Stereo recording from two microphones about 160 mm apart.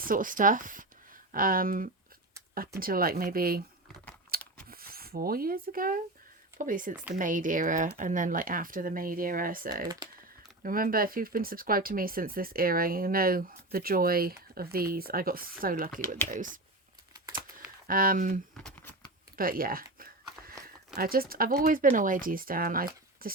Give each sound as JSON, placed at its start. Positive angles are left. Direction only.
{"t": 0.0, "sound": "speech", "side_deg": -60}
{"t": 4.3, "sound": "chewing", "side_deg": -65}
{"t": 4.7, "sound": "speech", "side_deg": -70}
{"t": 17.8, "sound": "speech", "side_deg": -65}
{"t": 18.5, "sound": "a sound", "side_deg": 10}
{"t": 19.4, "sound": "speech", "side_deg": -65}